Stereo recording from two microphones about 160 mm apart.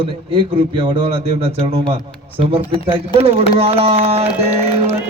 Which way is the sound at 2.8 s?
35° right (ahead or behind).